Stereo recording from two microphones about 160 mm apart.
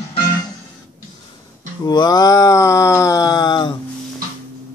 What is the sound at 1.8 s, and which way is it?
Male singing, 25° left (ahead or behind).